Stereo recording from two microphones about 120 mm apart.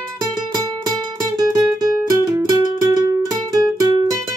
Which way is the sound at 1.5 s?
30° right (ahead or behind).